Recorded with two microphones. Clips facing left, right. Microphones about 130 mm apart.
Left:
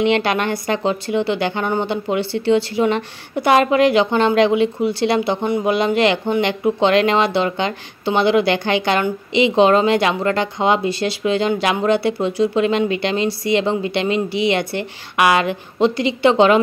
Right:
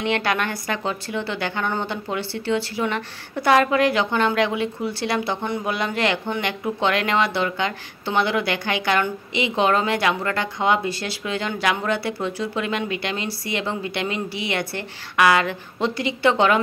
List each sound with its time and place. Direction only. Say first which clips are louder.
0.0 s speech: left 6 dB; 20° left (ahead or behind)